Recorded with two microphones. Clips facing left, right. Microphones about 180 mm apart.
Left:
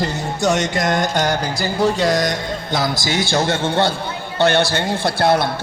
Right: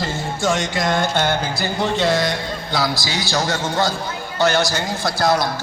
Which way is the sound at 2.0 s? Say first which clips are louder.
Left 1 dB; 40° left (ahead or behind).